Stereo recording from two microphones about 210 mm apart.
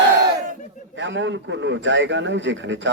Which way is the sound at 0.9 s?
60° right (ahead or behind).